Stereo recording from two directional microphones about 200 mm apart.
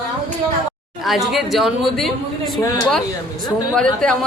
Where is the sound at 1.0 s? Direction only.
Centre (ahead or behind).